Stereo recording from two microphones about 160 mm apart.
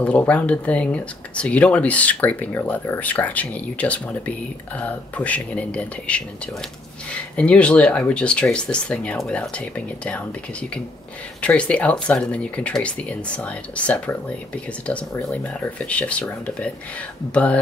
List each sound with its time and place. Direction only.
0.0 s speech: 10° left (ahead or behind)
11.4 s speech: 10° left (ahead or behind)